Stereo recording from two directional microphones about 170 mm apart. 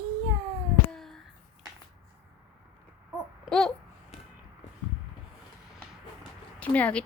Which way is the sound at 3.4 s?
5° left (ahead or behind).